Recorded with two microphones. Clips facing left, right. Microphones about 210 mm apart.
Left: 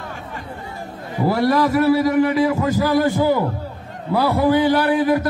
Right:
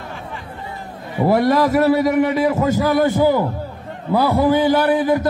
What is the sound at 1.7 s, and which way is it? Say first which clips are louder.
A man's voice: right 1 dB; 25° right (ahead or behind).